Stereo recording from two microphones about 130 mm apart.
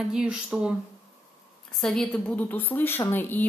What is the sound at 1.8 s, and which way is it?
A woman's voice, 5° left (ahead or behind).